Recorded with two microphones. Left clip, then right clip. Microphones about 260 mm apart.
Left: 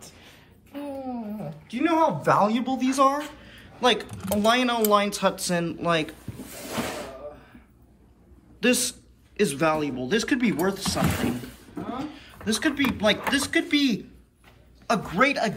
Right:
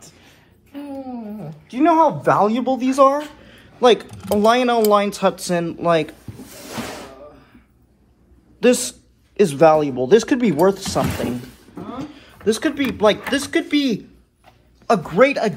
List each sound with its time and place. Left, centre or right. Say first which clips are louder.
0.7 s a sound: right 2 dB; left
1.7 s speech: right 8 dB; centre
8.5 s a man's voice: right 7 dB; centre